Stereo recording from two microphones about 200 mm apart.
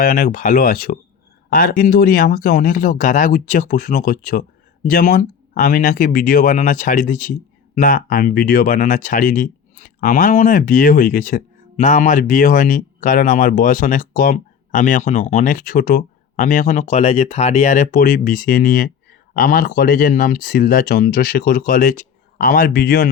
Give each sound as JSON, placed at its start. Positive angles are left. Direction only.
{"t": 0.0, "sound": "speech", "side_deg": 45}